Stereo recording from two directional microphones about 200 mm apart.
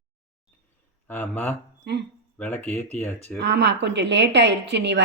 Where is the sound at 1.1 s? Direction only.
10° left (ahead or behind).